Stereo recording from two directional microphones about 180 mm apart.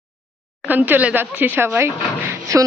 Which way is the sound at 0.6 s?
10° right (ahead or behind).